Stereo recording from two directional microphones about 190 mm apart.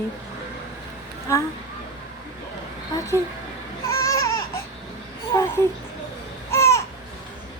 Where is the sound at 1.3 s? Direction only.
15° left (ahead or behind).